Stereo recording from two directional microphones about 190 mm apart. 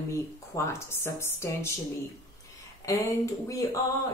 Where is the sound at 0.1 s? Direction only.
15° left (ahead or behind).